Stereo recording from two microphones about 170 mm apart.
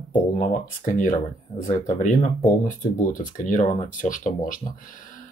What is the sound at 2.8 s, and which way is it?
Speech, 50° left (ahead or behind).